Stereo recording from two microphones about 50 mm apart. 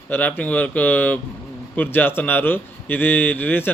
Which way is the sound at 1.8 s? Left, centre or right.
Left.